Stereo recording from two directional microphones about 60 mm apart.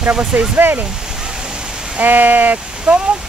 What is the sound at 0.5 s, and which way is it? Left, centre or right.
Speech, right.